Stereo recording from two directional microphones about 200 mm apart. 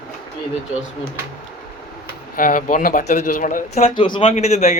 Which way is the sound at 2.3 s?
45° left (ahead or behind).